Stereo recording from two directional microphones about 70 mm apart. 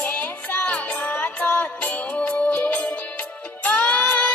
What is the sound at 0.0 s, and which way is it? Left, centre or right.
Music, left.